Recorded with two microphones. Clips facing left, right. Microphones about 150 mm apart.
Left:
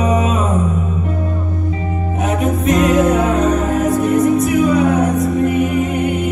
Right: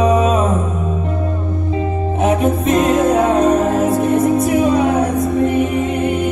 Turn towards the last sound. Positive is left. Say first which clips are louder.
# even
turn(degrees=-30)  # may be behind; listen again after turning